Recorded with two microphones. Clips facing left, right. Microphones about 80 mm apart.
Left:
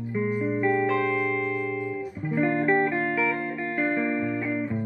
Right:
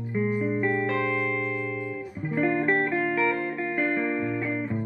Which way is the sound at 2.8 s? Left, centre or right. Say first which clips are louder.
Left 1 dB; left.